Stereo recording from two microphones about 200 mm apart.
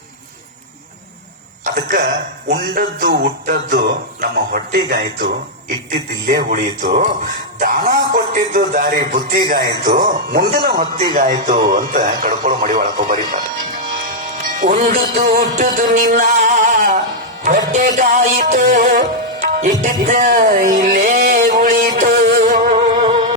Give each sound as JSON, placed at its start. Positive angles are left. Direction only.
{"t": 1.6, "sound": "a sound", "side_deg": -40}
{"t": 2.5, "sound": "music", "side_deg": -55}
{"t": 11.7, "sound": "speech", "side_deg": -45}
{"t": 14.6, "sound": "music", "side_deg": -45}
{"t": 19.8, "sound": "a sound", "side_deg": -40}
{"t": 23.0, "sound": "music", "side_deg": -35}